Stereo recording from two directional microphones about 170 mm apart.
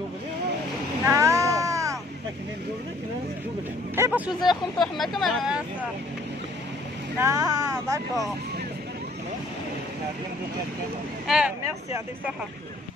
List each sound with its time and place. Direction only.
1.0 s a sound: 15° right (ahead or behind)
3.9 s speech: 15° right (ahead or behind)
4.7 s speech: centre (ahead or behind)
7.2 s speech: 15° right (ahead or behind)
11.2 s speech: 5° right (ahead or behind)